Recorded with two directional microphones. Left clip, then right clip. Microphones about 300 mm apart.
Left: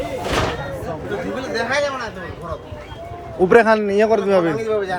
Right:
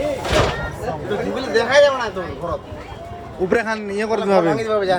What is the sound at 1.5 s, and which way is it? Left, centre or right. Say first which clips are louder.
Speech: right 7 dB; right.